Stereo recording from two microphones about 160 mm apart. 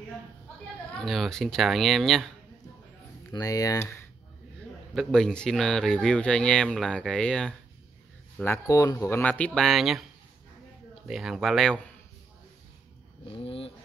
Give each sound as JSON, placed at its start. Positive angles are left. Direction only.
{"t": 0.9, "sound": "speech", "side_deg": 0}
{"t": 3.3, "sound": "speech", "side_deg": 20}
{"t": 4.9, "sound": "speech", "side_deg": 5}
{"t": 8.6, "sound": "speech", "side_deg": 20}
{"t": 11.1, "sound": "speech", "side_deg": 0}
{"t": 13.2, "sound": "a sound", "side_deg": 35}